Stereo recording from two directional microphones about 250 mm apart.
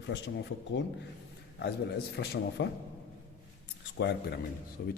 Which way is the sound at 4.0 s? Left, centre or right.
Left.